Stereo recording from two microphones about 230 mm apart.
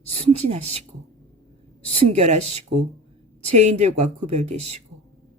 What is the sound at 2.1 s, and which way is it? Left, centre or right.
A woman's voice, right.